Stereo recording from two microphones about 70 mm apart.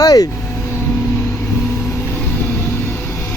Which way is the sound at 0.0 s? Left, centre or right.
Left.